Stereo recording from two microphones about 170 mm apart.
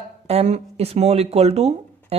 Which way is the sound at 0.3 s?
40° right (ahead or behind).